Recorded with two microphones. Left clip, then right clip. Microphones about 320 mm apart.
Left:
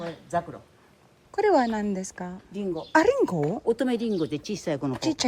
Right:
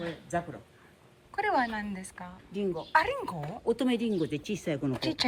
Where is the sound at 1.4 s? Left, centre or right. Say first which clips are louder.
Left 6 dB; centre.